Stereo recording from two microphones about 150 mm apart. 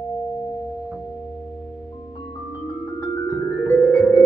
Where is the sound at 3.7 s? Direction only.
10° left (ahead or behind).